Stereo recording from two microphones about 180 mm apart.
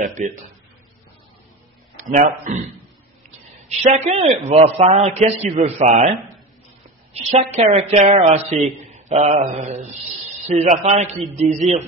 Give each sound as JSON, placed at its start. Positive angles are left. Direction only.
{"t": 0.2, "sound": "speech", "side_deg": -45}
{"t": 2.0, "sound": "speech", "side_deg": -45}
{"t": 3.6, "sound": "a man's voice", "side_deg": -35}
{"t": 7.2, "sound": "a man's voice", "side_deg": -40}